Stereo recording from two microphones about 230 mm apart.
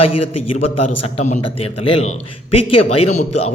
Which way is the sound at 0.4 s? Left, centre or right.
Left.